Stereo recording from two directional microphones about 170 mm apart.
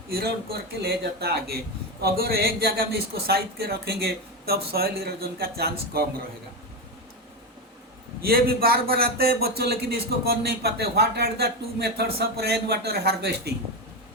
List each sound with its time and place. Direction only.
0.8 s a man's voice: 70° right (ahead or behind)
8.2 s a man's voice: 65° right (ahead or behind)